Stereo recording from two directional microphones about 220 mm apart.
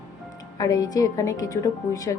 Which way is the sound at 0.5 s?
15° left (ahead or behind).